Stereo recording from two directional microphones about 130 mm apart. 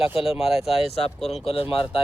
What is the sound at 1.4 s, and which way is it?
Speech, 45° left (ahead or behind).